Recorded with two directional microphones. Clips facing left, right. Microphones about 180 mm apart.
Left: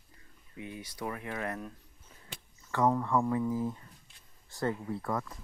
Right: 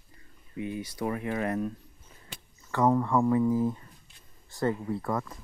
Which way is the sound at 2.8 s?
35° right (ahead or behind).